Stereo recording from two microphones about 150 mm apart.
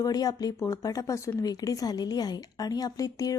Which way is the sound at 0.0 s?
25° left (ahead or behind).